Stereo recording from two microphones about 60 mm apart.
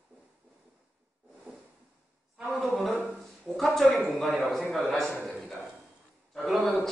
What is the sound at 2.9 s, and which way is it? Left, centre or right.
Speech, right.